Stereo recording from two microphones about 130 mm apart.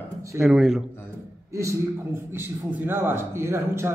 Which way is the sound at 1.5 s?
25° right (ahead or behind).